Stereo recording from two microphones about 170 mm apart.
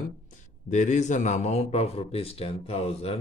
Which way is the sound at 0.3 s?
45° left (ahead or behind).